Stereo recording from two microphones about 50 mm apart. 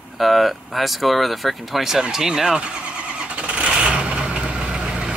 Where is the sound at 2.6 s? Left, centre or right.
Right.